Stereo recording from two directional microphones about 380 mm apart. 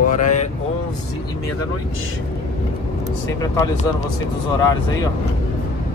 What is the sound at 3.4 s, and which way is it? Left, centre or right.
Speech, centre.